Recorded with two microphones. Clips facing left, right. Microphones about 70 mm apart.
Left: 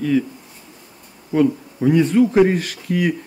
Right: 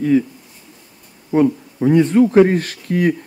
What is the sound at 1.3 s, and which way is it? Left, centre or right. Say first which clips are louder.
Speech: right 2 dB; right.